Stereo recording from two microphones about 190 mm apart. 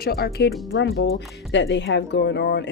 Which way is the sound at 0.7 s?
80° left.